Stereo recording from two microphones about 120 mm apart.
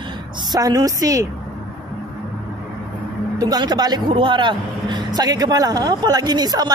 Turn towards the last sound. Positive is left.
turn(degrees=-35)  # may be behind; listen again after turning